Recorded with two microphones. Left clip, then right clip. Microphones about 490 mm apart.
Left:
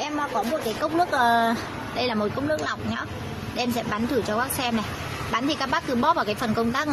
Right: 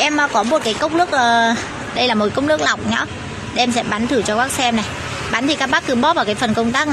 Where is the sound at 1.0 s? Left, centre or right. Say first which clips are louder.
Right 6 dB; left.